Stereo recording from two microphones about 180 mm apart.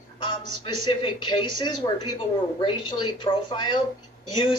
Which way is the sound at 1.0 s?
25° left (ahead or behind).